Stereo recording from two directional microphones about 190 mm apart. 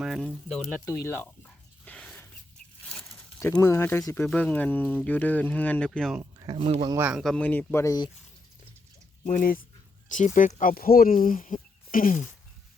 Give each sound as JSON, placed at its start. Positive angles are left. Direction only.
{"t": 0.0, "sound": "speech", "side_deg": 0}
{"t": 0.9, "sound": "a sound", "side_deg": 15}
{"t": 3.4, "sound": "speech", "side_deg": 15}
{"t": 6.4, "sound": "speech", "side_deg": -30}
{"t": 6.9, "sound": "speech", "side_deg": -10}
{"t": 9.2, "sound": "speech", "side_deg": 45}